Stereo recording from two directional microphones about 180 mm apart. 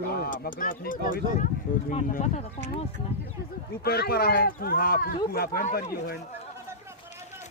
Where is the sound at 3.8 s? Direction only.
60° left (ahead or behind).